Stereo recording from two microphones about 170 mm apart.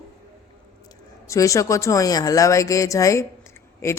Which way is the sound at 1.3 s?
20° left (ahead or behind).